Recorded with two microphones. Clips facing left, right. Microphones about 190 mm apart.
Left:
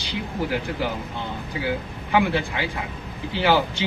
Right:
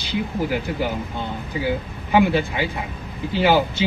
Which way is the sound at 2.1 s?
20° right (ahead or behind).